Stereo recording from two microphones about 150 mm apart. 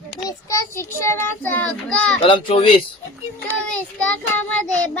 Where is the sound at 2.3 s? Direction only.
35° left (ahead or behind).